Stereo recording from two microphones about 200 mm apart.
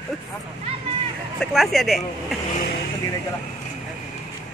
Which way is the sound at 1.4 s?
Centre (ahead or behind).